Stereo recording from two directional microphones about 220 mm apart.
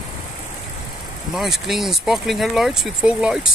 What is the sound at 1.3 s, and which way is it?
Speech, centre (ahead or behind).